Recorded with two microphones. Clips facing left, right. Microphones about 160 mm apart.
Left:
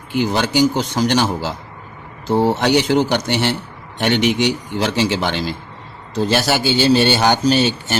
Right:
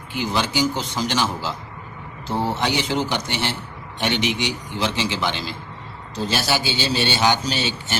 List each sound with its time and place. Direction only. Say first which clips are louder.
0.1 s a man's voice: left 6 dB; 55° left (ahead or behind)
2.6 s a man's voice: left 7 dB; 60° left (ahead or behind)